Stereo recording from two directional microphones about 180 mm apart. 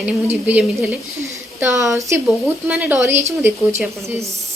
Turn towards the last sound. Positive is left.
turn(degrees=-15)  # may be behind; listen again after turning